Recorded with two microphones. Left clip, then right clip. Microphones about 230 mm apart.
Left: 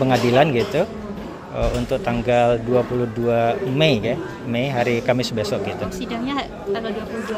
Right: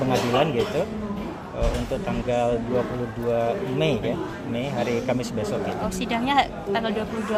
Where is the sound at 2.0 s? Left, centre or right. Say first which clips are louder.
Left 7 dB; left.